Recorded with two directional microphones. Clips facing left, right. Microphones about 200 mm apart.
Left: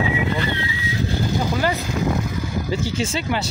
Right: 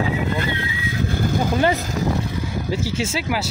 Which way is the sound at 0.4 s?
50° right (ahead or behind).